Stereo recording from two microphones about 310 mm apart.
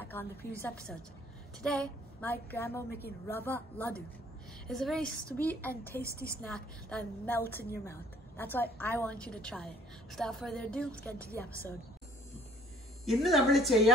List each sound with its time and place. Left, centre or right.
0.0 s a woman's voice: centre
5.9 s a woman's voice: left
6.4 s a woman's voice: centre
13.0 s a woman's voice: centre